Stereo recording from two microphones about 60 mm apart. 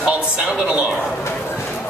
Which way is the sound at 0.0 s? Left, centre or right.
Right.